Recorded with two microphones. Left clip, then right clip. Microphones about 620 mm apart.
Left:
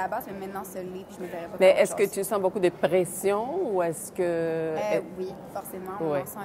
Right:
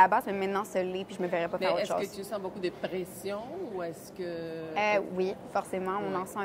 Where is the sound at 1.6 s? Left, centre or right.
Left.